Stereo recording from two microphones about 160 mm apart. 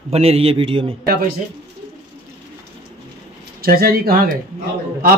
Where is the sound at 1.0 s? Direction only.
70° right (ahead or behind).